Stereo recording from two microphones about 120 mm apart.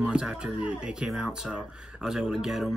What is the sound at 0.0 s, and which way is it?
Speech, 5° right (ahead or behind).